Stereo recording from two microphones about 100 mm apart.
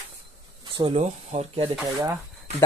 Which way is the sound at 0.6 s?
55° right (ahead or behind).